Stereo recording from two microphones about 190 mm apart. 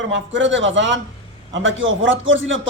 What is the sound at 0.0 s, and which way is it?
A man's voice, 75° right (ahead or behind).